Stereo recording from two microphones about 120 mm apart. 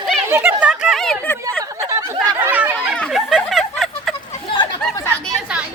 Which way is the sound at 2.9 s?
Centre (ahead or behind).